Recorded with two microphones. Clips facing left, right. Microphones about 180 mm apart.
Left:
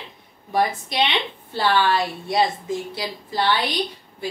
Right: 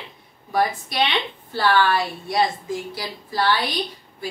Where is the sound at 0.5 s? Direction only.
20° left (ahead or behind).